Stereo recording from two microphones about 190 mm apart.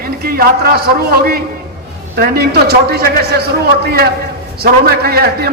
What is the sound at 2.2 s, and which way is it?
A man's voice, 55° right (ahead or behind).